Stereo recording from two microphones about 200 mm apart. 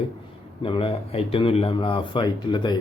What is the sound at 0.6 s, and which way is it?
Speech, 25° left (ahead or behind).